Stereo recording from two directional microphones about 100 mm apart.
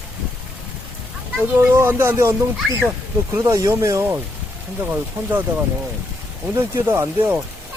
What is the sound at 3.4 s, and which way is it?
Speech, 35° right (ahead or behind).